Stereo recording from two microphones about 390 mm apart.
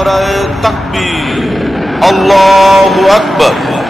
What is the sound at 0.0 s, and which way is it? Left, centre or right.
Speech, centre.